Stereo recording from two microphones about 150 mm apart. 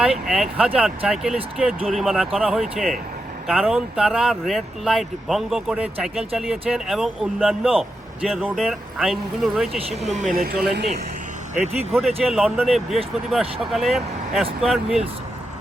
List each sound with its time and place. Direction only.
0.0 s speech: 5° right (ahead or behind)
10.3 s speech: 85° right
11.5 s speech: 50° right (ahead or behind)
11.9 s speech: centre (ahead or behind)